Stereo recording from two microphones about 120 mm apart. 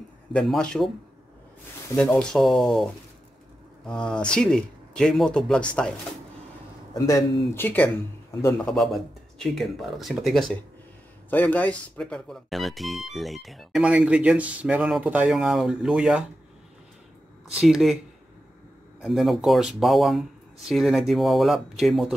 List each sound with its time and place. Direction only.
0.3 s speech: 5° left (ahead or behind)
2.0 s speech: 10° left (ahead or behind)
6.9 s speech: 30° left (ahead or behind)
7.5 s a man's voice: 15° left (ahead or behind)
8.6 s speech: centre (ahead or behind)
11.2 s speech: 15° left (ahead or behind); by 16.3 s 5° right (ahead or behind)
17.6 s speech: 5° right (ahead or behind)
19.0 s speech: centre (ahead or behind)